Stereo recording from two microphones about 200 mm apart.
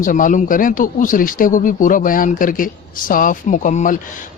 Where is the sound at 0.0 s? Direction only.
40° left (ahead or behind).